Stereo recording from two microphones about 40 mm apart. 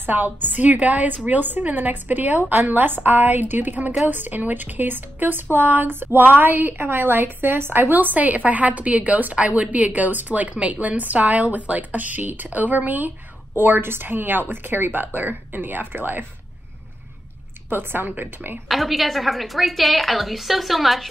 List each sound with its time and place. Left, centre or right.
0.0 s a woman's voice: right
2.6 s a woman's voice: right
7.9 s a woman's voice: right
13.6 s a woman's voice: right
17.6 s a woman's voice: right
18.7 s a woman's voice: centre